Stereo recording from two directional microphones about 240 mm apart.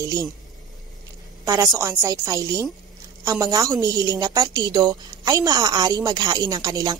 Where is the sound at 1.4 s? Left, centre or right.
Centre.